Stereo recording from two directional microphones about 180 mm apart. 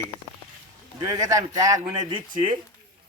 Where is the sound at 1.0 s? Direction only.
20° right (ahead or behind).